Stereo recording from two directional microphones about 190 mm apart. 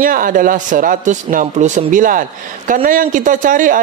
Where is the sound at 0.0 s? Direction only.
45° right (ahead or behind).